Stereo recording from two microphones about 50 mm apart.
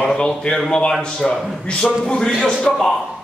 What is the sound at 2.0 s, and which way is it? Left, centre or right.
Speech, centre.